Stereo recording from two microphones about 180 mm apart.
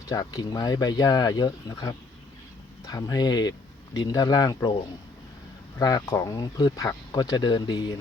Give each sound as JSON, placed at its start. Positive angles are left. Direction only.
{"t": 0.1, "sound": "speech", "side_deg": 20}
{"t": 5.8, "sound": "speech", "side_deg": 20}